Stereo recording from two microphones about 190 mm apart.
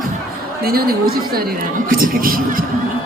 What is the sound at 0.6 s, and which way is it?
Speech, 55° right (ahead or behind).